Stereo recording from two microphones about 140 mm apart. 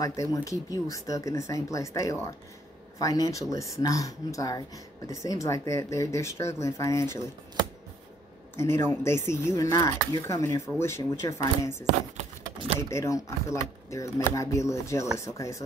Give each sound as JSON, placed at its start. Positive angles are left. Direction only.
{"t": 0.0, "sound": "speech", "side_deg": 25}
{"t": 8.5, "sound": "speech", "side_deg": 20}
{"t": 12.9, "sound": "speech", "side_deg": 20}